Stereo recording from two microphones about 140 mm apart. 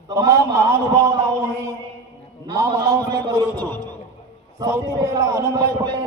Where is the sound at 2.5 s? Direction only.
25° right (ahead or behind).